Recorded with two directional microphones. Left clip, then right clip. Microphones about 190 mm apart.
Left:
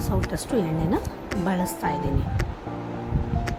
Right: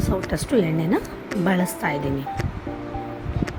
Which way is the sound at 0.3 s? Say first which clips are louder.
Right 5 dB; 10° right (ahead or behind).